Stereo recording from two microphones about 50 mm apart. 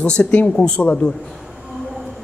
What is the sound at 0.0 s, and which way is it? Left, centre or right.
Speech, left.